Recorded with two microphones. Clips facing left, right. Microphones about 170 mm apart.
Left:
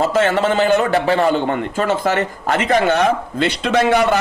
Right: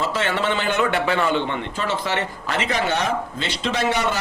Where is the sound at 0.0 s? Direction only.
45° left (ahead or behind).